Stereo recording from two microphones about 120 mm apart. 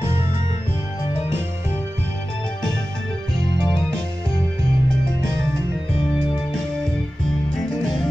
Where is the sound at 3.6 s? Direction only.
40° left (ahead or behind).